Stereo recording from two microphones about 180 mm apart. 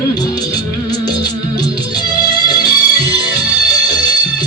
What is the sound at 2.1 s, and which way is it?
Music, 25° left (ahead or behind).